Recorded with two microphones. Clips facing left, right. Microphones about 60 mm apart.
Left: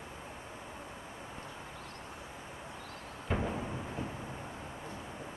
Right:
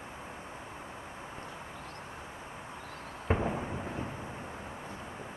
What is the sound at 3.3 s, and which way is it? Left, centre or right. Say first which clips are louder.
Fireworks: right 4 dB; right.